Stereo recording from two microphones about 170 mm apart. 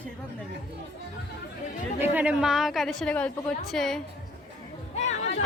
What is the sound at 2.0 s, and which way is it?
A woman's voice, 10° right (ahead or behind).